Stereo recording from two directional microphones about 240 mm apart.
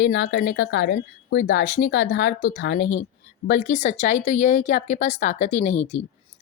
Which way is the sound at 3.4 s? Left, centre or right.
Left.